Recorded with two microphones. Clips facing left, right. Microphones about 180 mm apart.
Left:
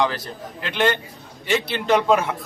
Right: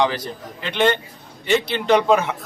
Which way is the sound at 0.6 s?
Centre (ahead or behind).